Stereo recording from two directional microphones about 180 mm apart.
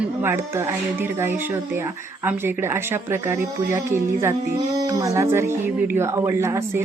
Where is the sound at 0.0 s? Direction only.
10° right (ahead or behind).